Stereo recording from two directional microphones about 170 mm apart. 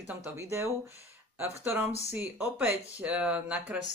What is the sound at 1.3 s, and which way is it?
Speech, 10° right (ahead or behind).